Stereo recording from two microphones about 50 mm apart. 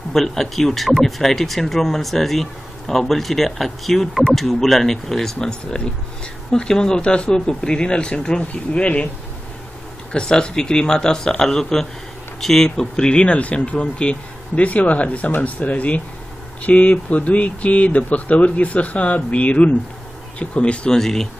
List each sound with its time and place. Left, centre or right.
0.1 s speech: centre; by 9.1 s left
10.1 s speech: centre
21.0 s speech: centre